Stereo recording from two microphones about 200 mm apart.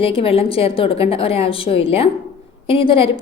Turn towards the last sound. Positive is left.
turn(degrees=25)  # may be behind; listen again after turning